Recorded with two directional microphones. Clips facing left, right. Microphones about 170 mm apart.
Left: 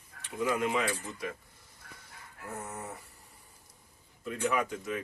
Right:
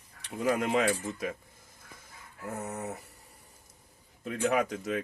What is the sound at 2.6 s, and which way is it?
Speech, 70° right (ahead or behind).